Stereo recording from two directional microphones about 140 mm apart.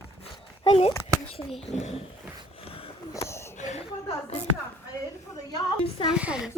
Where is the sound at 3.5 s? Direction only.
55° left (ahead or behind).